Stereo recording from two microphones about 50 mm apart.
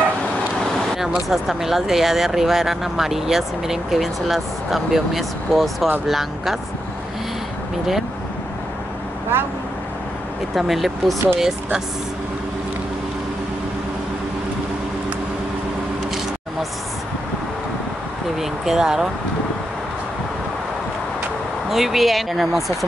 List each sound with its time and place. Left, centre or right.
1.3 s speech: centre
9.3 s speech: right
10.5 s speech: centre
18.4 s speech: centre
21.6 s speech: centre